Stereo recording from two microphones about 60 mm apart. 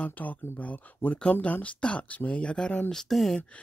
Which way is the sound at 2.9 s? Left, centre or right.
Centre.